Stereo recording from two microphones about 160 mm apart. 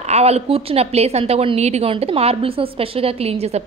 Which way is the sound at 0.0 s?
40° right (ahead or behind).